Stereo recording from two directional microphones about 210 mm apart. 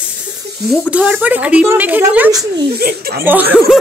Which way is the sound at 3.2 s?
10° right (ahead or behind).